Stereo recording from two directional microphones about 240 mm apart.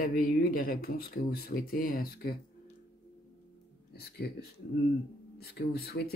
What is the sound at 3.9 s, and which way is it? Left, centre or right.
Speech, left.